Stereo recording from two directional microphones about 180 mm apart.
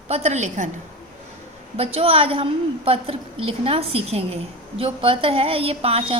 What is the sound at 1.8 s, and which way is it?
A woman's voice, 35° right (ahead or behind).